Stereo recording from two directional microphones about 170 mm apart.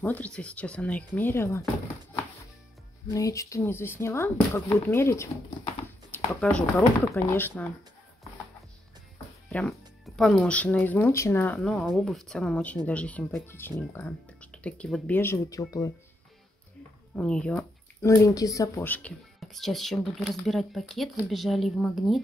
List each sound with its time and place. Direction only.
0.0 s speech: 10° left (ahead or behind)
3.1 s speech: 20° left (ahead or behind)
9.5 s speech: 5° left (ahead or behind)
17.1 s speech: 5° left (ahead or behind)
18.0 s speech: 20° left (ahead or behind)
19.4 s speech: centre (ahead or behind)